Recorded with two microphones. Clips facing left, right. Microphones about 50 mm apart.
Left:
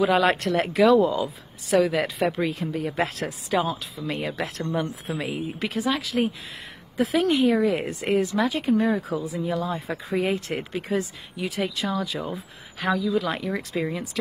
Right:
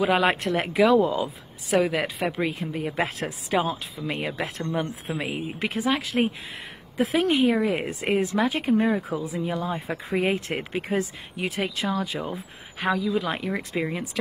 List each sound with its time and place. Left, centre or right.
0.0 s speech: centre
1.7 s speech: right
2.0 s speech: centre
2.7 s speech: right
4.2 s speech: centre
4.7 s speech: centre
5.2 s speech: centre
5.6 s speech: right
8.9 s speech: right